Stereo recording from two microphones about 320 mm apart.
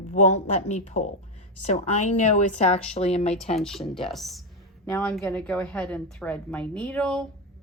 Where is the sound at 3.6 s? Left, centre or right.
Centre.